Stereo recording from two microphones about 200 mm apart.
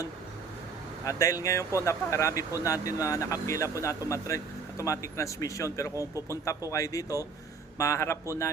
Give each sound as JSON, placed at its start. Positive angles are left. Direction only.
{"t": 1.0, "sound": "speech", "side_deg": 15}